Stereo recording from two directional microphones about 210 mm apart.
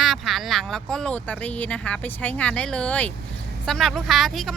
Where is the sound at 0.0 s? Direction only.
Centre (ahead or behind).